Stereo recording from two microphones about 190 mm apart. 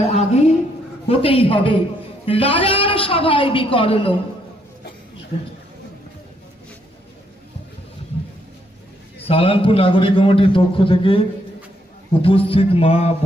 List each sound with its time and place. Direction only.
0.1 s a sound: 35° left (ahead or behind)
1.0 s a man's voice: 30° left (ahead or behind)
9.2 s a man's voice: 30° left (ahead or behind)